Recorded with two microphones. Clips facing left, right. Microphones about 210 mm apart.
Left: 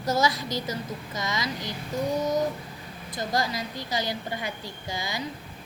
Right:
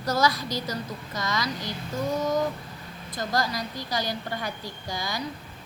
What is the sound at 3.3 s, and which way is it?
A woman's voice, 20° left (ahead or behind).